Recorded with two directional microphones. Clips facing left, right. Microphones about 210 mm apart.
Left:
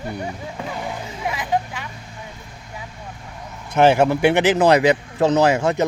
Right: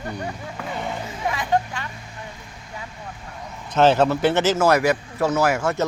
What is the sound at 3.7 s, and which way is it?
Speech, 10° left (ahead or behind).